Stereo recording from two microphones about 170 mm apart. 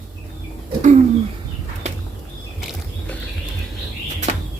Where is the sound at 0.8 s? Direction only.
45° right (ahead or behind).